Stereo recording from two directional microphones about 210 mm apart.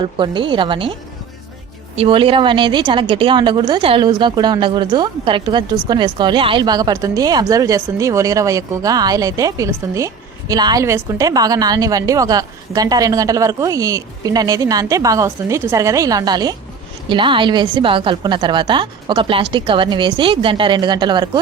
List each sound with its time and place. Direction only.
0.0 s a woman's voice: 25° right (ahead or behind)
2.0 s a woman's voice: 25° right (ahead or behind)